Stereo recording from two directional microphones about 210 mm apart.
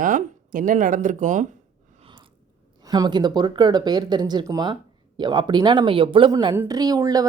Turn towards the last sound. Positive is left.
turn(degrees=-15)  # may be behind; listen again after turning